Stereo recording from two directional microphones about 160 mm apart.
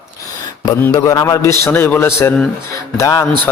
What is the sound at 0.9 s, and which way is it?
A man's voice, 20° left (ahead or behind).